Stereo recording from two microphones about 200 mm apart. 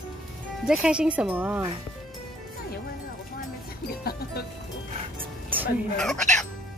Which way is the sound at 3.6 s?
50° left (ahead or behind).